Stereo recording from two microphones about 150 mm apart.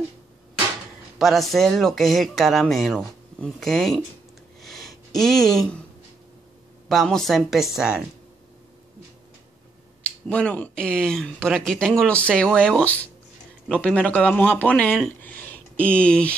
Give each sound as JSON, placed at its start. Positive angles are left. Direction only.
{"t": 1.1, "sound": "speech", "side_deg": 0}
{"t": 4.6, "sound": "a sound", "side_deg": 0}
{"t": 6.9, "sound": "speech", "side_deg": 0}
{"t": 10.2, "sound": "speech", "side_deg": 10}